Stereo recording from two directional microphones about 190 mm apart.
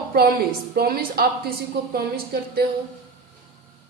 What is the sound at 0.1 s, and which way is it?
Speech, 50° right (ahead or behind).